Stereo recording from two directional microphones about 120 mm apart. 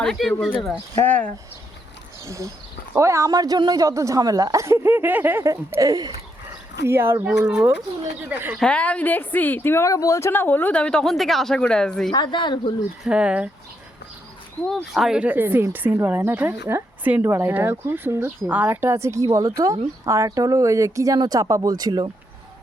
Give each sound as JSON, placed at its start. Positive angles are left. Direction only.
{"t": 0.0, "sound": "speech", "side_deg": 5}
{"t": 0.9, "sound": "a woman's voice", "side_deg": 15}
{"t": 2.2, "sound": "a woman's voice", "side_deg": -25}
{"t": 6.8, "sound": "a woman's voice", "side_deg": -20}
{"t": 8.5, "sound": "a woman's voice", "side_deg": 10}
{"t": 12.1, "sound": "speech", "side_deg": 40}
{"t": 13.1, "sound": "speech", "side_deg": -10}
{"t": 14.9, "sound": "a woman's voice", "side_deg": -5}